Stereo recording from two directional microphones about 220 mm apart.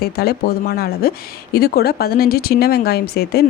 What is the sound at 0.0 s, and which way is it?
Speech, 45° left (ahead or behind).